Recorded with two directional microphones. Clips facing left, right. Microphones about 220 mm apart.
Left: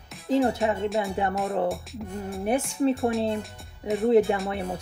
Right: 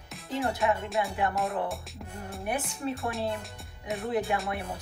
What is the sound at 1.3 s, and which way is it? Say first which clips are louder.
Speech: left 5 dB; centre (ahead or behind).